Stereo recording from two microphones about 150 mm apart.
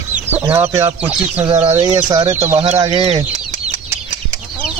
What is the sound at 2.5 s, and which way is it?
Speech, 45° right (ahead or behind).